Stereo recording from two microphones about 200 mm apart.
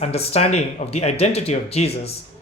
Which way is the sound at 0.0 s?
30° left (ahead or behind).